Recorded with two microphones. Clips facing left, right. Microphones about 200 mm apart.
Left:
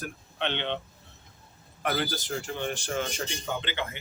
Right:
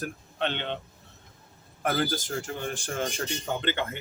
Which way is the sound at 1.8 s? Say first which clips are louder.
Right 2 dB; 45° right (ahead or behind).